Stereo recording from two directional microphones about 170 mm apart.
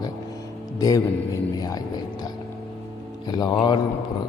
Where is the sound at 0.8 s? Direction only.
20° left (ahead or behind).